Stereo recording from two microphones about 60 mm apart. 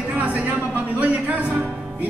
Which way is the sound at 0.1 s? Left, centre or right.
Right.